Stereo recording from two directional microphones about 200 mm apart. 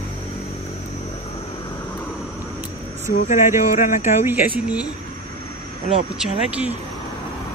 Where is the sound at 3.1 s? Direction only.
40° left (ahead or behind).